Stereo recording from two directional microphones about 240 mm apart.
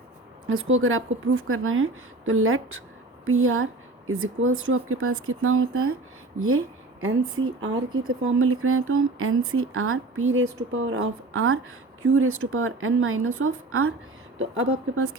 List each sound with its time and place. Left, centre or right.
0.4 s speech: right